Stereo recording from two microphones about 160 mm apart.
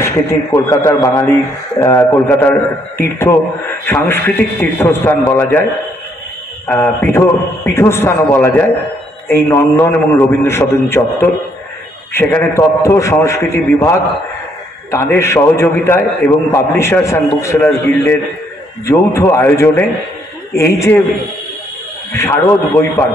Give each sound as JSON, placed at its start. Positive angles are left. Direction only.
{"t": 0.0, "sound": "a man's voice", "side_deg": 20}
{"t": 6.7, "sound": "a man's voice", "side_deg": 15}
{"t": 22.1, "sound": "a man's voice", "side_deg": 15}